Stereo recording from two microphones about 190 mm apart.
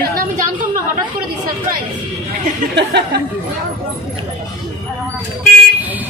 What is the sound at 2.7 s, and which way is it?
Speech, 60° right (ahead or behind).